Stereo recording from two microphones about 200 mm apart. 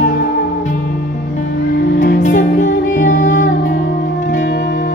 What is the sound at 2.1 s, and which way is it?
Music, 40° left (ahead or behind).